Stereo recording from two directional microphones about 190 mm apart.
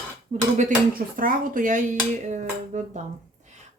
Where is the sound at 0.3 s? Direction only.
40° right (ahead or behind).